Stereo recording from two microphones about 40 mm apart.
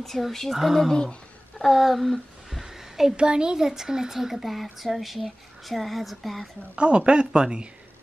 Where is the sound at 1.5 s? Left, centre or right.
Centre.